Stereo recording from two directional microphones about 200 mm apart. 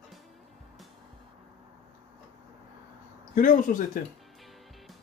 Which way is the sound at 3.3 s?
40° left (ahead or behind).